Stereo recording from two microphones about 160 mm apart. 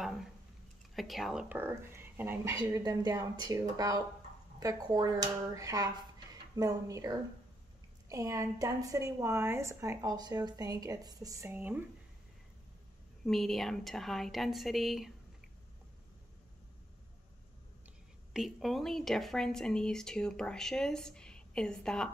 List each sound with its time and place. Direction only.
0.0 s a sound: centre (ahead or behind)
0.9 s speech: centre (ahead or behind)
1.6 s speech: 15° right (ahead or behind)
2.8 s a woman's voice: 25° right (ahead or behind)
13.2 s speech: centre (ahead or behind)
18.3 s speech: centre (ahead or behind)